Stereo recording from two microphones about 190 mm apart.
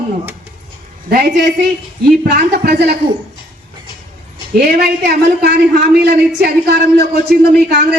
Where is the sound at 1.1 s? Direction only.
55° right (ahead or behind).